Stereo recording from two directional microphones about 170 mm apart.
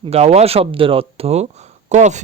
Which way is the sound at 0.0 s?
40° right (ahead or behind).